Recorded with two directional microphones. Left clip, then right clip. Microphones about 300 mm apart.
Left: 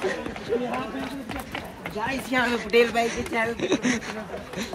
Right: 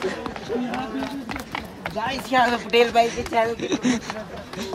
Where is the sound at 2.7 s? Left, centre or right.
Right.